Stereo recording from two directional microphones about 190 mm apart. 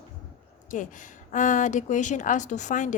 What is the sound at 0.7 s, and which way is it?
A woman's voice, 40° left (ahead or behind).